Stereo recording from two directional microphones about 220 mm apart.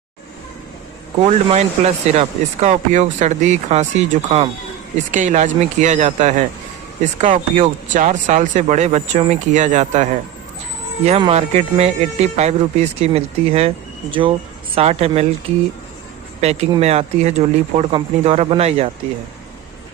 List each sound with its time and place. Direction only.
1.2 s speech: 30° right (ahead or behind)
16.4 s speech: 30° right (ahead or behind)